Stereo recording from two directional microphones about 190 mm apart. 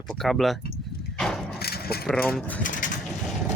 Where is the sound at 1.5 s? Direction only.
55° left (ahead or behind).